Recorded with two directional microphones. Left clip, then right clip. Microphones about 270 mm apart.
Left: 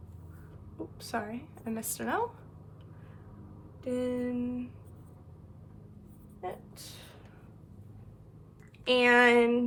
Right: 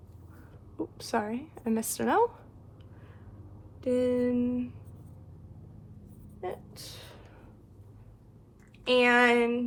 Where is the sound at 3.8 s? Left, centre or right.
Right.